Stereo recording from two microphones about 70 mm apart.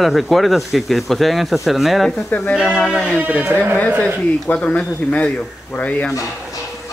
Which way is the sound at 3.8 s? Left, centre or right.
Centre.